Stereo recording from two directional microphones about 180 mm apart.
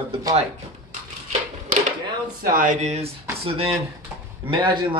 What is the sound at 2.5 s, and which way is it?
Speech, 45° right (ahead or behind).